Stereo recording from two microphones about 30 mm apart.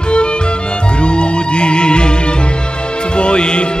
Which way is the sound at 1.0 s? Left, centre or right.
Left.